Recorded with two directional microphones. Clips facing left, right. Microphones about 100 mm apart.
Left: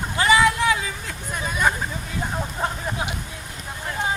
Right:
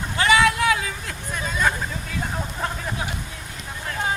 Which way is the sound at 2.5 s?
15° left (ahead or behind).